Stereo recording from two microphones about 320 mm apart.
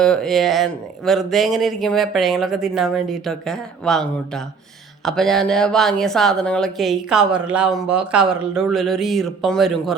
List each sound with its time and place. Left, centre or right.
0.0 s a woman's voice: centre